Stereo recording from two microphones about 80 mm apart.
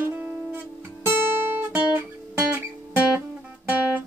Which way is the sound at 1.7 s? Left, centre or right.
Right.